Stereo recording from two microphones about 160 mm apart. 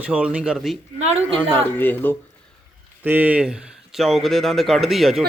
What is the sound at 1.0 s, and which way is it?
Speech, 40° right (ahead or behind).